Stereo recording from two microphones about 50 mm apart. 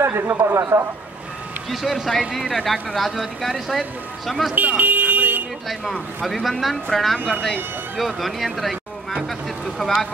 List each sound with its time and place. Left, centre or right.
0.0 s a sound: right
0.4 s speech: right
1.7 s speech: centre
4.6 s a sound: right
6.2 s speech: centre
9.8 s speech: centre